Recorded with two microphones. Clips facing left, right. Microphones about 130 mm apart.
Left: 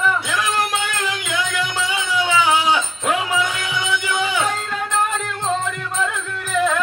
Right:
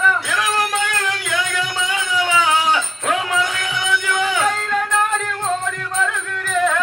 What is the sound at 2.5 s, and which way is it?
Music, 15° left (ahead or behind).